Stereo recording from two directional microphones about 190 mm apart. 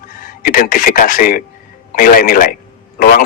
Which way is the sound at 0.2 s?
45° left (ahead or behind).